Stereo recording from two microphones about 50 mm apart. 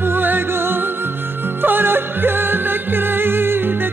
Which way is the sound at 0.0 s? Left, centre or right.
Right.